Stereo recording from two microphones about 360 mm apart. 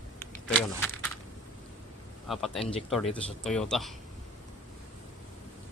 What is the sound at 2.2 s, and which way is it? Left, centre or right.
A man's voice, centre.